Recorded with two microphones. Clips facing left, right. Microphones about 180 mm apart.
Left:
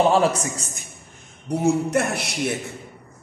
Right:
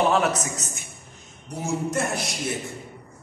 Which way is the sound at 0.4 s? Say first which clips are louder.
Left 2 dB; 30° left (ahead or behind).